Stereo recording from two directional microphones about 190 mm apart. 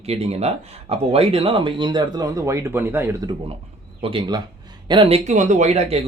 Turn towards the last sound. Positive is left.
turn(degrees=-35)  # may be behind; listen again after turning